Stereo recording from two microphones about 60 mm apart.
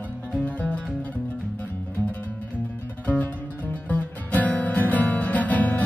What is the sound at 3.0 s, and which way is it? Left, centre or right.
Music, left.